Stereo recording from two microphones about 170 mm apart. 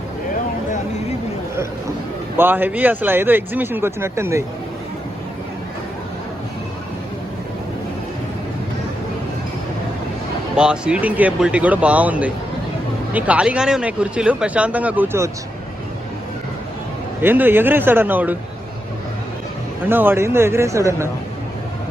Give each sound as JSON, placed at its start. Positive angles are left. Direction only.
{"t": 2.4, "sound": "speech", "side_deg": -10}
{"t": 10.5, "sound": "speech", "side_deg": -5}
{"t": 17.2, "sound": "speech", "side_deg": -10}
{"t": 19.9, "sound": "speech", "side_deg": -10}